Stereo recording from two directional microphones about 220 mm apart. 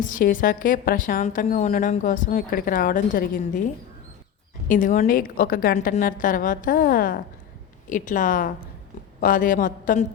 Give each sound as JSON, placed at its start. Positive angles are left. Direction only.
{"t": 0.0, "sound": "a woman's voice", "side_deg": 40}
{"t": 4.7, "sound": "a woman's voice", "side_deg": 35}